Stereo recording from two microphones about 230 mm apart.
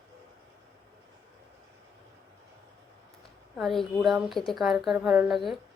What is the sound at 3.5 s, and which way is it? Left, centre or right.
Speech, centre.